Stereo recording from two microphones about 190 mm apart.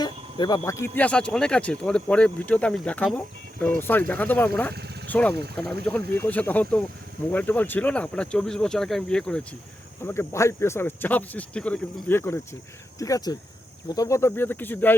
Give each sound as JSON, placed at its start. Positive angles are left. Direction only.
{"t": 0.0, "sound": "speech", "side_deg": 20}
{"t": 4.7, "sound": "vehicle", "side_deg": -60}
{"t": 6.1, "sound": "speech", "side_deg": 10}